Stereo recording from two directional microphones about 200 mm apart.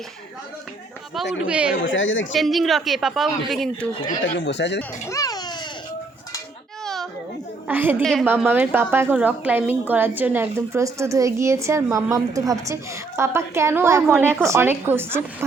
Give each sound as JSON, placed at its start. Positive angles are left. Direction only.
{"t": 1.5, "sound": "a woman's voice", "side_deg": -5}
{"t": 1.8, "sound": "a woman's voice", "side_deg": 75}
{"t": 2.3, "sound": "a woman's voice", "side_deg": 0}
{"t": 4.2, "sound": "speech", "side_deg": 60}
{"t": 4.8, "sound": "a child's voice", "side_deg": 15}
{"t": 6.8, "sound": "children playing", "side_deg": 0}
{"t": 7.7, "sound": "a woman's voice", "side_deg": -10}
{"t": 8.0, "sound": "a woman's voice", "side_deg": 0}
{"t": 8.3, "sound": "a woman's voice", "side_deg": -10}